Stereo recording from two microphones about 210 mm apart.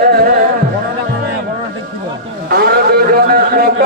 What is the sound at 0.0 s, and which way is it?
Music, 45° right (ahead or behind).